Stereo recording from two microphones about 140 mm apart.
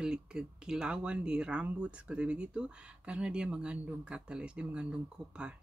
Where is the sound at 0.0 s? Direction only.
5° right (ahead or behind).